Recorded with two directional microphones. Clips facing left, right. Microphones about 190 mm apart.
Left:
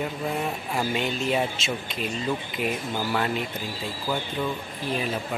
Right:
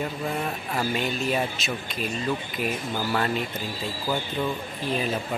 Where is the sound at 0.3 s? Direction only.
10° left (ahead or behind).